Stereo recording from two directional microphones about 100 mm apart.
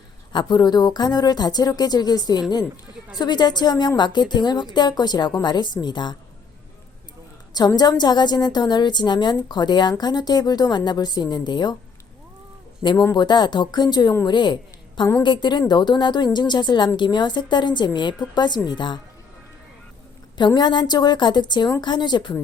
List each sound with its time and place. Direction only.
0.3 s a woman's voice: 50° left (ahead or behind)
7.8 s a woman's voice: 45° left (ahead or behind)
13.1 s a woman's voice: 45° left (ahead or behind)
20.6 s a woman's voice: 50° left (ahead or behind)